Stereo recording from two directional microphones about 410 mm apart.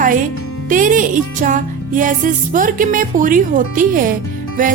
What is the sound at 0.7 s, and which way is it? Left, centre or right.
Speech, centre.